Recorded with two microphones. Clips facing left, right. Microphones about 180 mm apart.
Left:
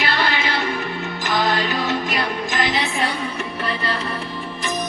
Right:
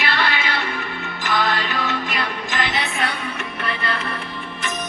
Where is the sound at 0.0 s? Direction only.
40° left (ahead or behind).